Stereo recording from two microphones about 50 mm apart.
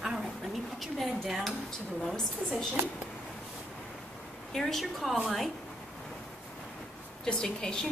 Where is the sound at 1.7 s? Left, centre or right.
Centre.